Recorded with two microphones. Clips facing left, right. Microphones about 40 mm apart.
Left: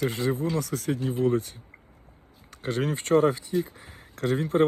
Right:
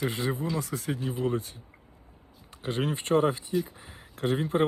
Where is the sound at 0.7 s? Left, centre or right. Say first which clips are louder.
Left 4 dB; right.